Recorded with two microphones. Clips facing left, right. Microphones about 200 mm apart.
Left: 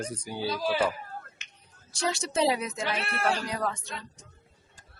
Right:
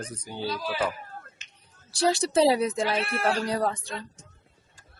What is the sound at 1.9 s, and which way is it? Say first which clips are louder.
Speech: right 6 dB; 35° right (ahead or behind).